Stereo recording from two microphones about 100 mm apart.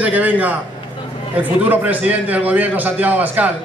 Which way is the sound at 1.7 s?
15° right (ahead or behind).